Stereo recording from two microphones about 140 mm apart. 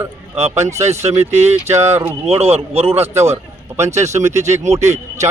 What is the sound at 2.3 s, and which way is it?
A man's voice, 50° right (ahead or behind).